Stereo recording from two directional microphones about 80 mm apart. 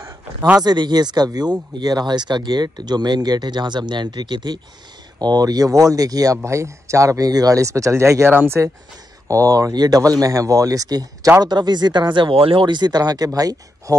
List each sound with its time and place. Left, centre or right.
0.6 s speech: right
5.2 s speech: right
9.3 s speech: right
11.4 s speech: right